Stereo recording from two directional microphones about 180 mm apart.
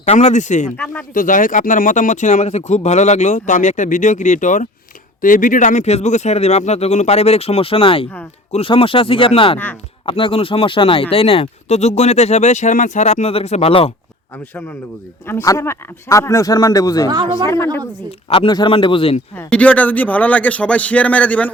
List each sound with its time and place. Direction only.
0.0 s speech: 40° left (ahead or behind)
15.3 s a man's voice: 15° left (ahead or behind)
18.3 s speech: 30° left (ahead or behind)
19.4 s a man's voice: 5° left (ahead or behind)